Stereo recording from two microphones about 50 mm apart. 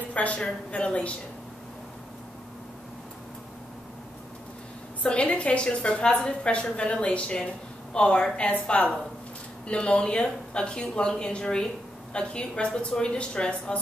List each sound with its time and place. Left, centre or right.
0.1 s a woman's voice: left
5.0 s a woman's voice: left